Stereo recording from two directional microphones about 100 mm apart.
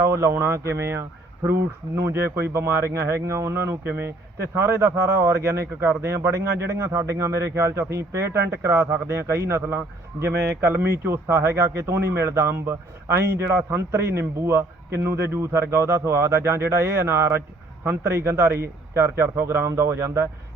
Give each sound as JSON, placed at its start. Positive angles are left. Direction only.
{"t": 0.0, "sound": "speech", "side_deg": -30}